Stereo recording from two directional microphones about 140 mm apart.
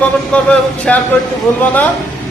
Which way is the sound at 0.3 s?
5° left (ahead or behind).